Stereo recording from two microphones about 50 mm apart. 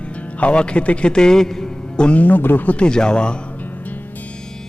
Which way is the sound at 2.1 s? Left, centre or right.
Left.